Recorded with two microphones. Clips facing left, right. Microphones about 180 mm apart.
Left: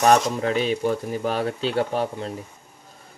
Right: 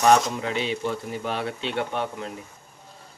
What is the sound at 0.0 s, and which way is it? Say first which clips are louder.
Speech: left 1 dB; 45° left (ahead or behind).